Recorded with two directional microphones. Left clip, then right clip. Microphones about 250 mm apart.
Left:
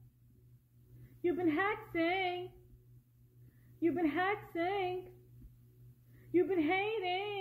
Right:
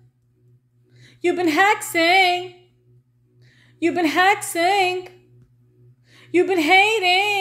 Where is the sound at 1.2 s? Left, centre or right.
Right.